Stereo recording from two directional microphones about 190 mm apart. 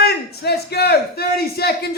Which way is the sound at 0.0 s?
60° left (ahead or behind).